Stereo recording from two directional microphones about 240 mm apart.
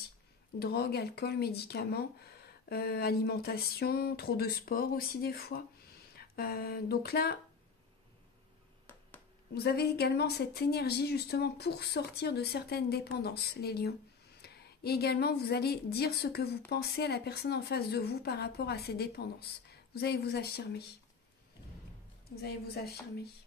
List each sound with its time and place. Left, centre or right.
0.6 s a woman's voice: left
6.1 s a sound: left
9.5 s a woman's voice: left
22.3 s a woman's voice: left